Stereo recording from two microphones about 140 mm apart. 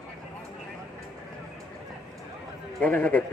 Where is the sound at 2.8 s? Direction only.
10° left (ahead or behind).